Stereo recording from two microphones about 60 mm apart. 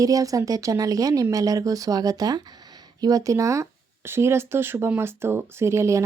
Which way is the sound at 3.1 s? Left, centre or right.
Right.